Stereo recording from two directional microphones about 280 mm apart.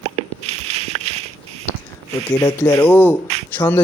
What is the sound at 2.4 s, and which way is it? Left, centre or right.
Speech, centre.